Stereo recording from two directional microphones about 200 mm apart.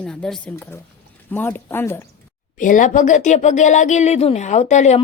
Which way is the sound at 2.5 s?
40° left (ahead or behind).